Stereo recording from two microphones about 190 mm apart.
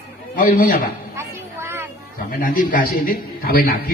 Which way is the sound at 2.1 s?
45° left (ahead or behind).